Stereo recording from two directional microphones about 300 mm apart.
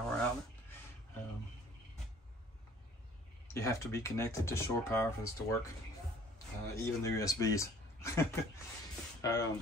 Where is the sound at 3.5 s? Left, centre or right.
Centre.